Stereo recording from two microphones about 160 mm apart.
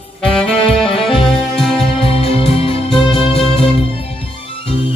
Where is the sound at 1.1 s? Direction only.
35° left (ahead or behind).